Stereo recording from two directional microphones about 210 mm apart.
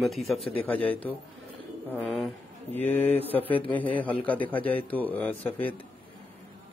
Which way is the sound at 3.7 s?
10° left (ahead or behind).